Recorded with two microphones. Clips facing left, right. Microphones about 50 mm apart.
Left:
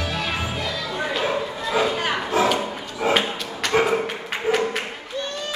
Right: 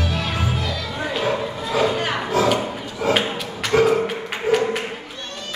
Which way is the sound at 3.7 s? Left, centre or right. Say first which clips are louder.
Right 3 dB; centre.